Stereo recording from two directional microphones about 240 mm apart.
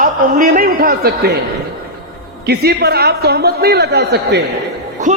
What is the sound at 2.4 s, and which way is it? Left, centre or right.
A man's voice, right.